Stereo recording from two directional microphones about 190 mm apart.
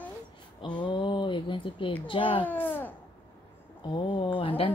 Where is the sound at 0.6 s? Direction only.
25° left (ahead or behind).